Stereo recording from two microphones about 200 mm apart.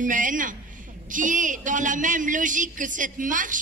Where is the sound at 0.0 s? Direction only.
40° right (ahead or behind).